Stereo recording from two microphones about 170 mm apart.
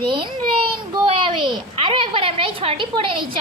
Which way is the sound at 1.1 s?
30° right (ahead or behind).